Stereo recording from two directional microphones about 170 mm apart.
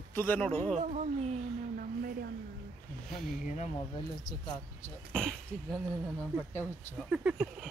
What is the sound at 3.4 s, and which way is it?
Speech, 45° left (ahead or behind).